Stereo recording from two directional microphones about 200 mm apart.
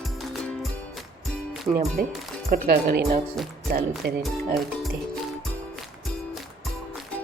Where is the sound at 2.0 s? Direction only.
50° right (ahead or behind).